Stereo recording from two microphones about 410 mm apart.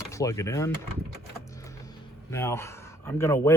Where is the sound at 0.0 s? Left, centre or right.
Centre.